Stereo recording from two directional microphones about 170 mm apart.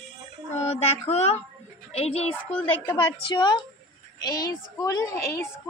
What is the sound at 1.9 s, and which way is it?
Speech, 35° left (ahead or behind).